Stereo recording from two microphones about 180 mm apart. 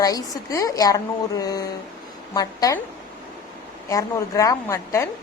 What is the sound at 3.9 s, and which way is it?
A woman's voice, 20° left (ahead or behind).